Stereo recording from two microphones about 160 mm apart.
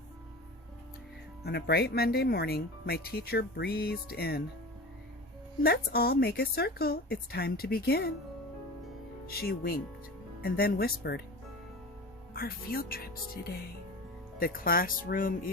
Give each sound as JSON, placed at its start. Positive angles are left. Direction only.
{"t": 1.5, "sound": "speech", "side_deg": 90}
{"t": 5.6, "sound": "a woman's voice", "side_deg": 75}
{"t": 9.2, "sound": "a woman's voice", "side_deg": 75}
{"t": 12.3, "sound": "a woman's voice", "side_deg": 70}